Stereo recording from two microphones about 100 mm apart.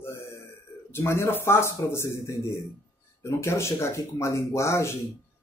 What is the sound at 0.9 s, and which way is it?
Speech, 25° left (ahead or behind).